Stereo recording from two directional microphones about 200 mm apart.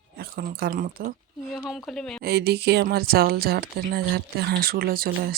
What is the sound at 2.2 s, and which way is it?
Speech, 55° right (ahead or behind).